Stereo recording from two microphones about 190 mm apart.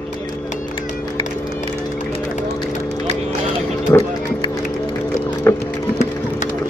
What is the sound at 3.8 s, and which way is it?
Music, 20° left (ahead or behind).